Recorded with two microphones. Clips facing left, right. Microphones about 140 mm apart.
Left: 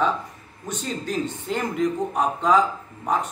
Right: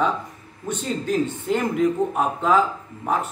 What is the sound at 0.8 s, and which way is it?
Speech, centre (ahead or behind).